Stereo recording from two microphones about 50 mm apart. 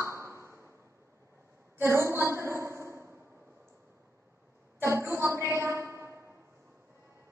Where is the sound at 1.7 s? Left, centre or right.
Right.